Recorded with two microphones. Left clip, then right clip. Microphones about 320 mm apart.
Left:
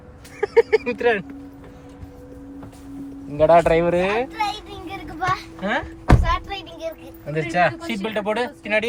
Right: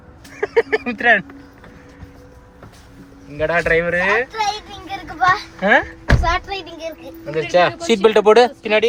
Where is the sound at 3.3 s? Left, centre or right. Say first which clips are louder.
Left 2 dB; centre.